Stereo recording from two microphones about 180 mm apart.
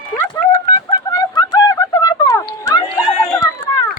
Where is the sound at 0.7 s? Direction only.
25° left (ahead or behind).